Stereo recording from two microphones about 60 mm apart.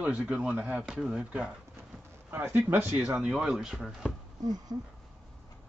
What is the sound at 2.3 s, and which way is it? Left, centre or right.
Speech, right.